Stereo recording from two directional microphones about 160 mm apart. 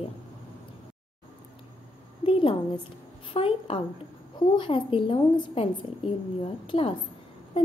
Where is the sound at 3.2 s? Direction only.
35° left (ahead or behind).